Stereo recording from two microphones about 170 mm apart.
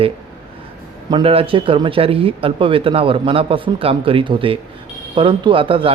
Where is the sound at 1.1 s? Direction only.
35° right (ahead or behind).